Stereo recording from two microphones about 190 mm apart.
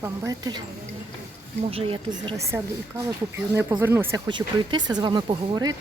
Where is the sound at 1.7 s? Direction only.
30° right (ahead or behind).